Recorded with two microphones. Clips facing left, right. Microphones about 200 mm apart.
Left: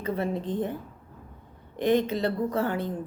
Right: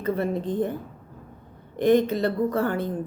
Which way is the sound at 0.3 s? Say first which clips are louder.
Right 3 dB; 10° right (ahead or behind).